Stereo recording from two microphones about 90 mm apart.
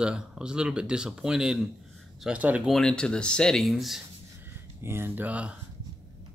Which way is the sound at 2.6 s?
5° left (ahead or behind).